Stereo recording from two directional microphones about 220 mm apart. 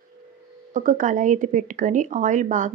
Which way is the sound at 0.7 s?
35° right (ahead or behind).